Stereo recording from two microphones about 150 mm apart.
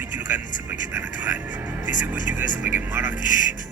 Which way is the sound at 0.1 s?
10° right (ahead or behind).